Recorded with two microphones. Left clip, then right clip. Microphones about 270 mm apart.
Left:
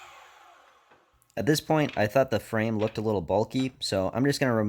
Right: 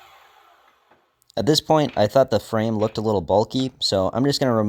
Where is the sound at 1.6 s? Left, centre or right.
Centre.